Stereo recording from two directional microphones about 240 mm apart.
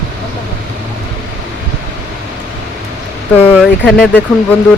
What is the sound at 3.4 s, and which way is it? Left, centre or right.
Speech, centre.